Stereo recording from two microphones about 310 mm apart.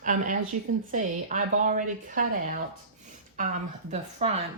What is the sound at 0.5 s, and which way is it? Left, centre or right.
Speech, right.